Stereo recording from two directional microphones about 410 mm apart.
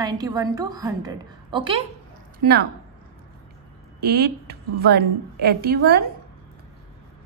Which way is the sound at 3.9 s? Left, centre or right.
Right.